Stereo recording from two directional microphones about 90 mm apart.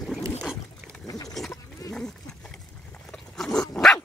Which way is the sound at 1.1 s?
40° left (ahead or behind).